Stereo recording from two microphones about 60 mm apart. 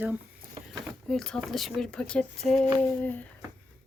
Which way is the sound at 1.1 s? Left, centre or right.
Centre.